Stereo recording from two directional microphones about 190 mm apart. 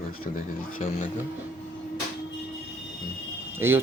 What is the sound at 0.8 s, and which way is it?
Speech, 40° left (ahead or behind).